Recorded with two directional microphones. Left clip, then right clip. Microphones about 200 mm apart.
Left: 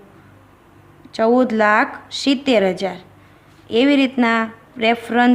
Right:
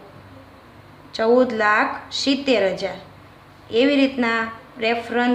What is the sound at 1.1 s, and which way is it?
A woman's voice, 45° left (ahead or behind).